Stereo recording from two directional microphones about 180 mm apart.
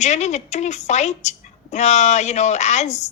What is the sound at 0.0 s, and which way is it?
A woman's voice, 40° left (ahead or behind).